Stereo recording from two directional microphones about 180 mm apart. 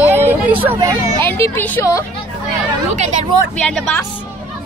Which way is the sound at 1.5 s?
10° left (ahead or behind).